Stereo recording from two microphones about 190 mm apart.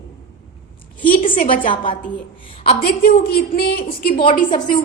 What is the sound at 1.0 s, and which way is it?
Speech, 45° left (ahead or behind).